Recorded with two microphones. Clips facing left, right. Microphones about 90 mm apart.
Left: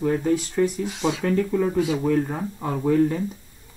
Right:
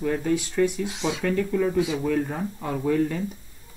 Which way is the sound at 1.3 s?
20° left (ahead or behind).